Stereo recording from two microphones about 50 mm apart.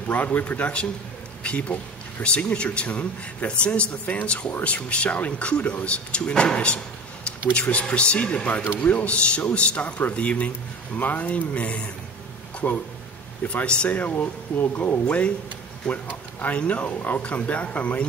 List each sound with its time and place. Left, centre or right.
0.1 s speech: left
7.8 s speech: left
15.8 s speech: centre
16.3 s speech: left